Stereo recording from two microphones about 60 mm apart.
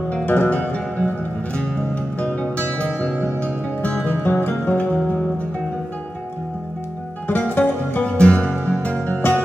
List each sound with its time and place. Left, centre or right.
0.1 s music: left
2.1 s music: left
4.0 s music: left
4.7 s music: left
7.2 s music: left
8.0 s music: centre